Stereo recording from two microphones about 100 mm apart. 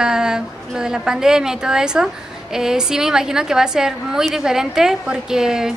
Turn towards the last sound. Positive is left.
turn(degrees=-5)  # may be behind; listen again after turning